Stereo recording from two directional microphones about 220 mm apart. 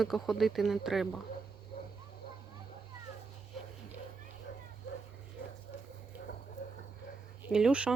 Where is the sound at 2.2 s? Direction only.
45° left (ahead or behind).